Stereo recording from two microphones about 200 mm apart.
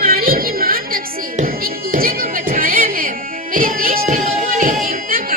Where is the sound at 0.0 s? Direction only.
45° right (ahead or behind).